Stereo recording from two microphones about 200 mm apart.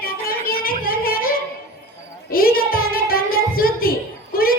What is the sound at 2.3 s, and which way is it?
Music, 45° left (ahead or behind).